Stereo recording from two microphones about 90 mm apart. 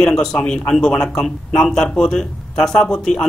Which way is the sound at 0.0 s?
5° left (ahead or behind).